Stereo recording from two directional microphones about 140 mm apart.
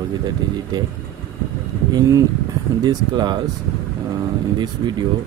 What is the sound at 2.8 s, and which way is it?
Speech, 30° right (ahead or behind).